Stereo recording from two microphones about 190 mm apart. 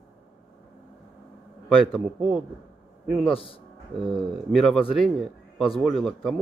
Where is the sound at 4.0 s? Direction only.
Centre (ahead or behind).